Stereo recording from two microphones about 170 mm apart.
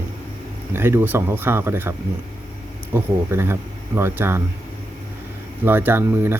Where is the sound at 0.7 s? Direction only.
15° right (ahead or behind).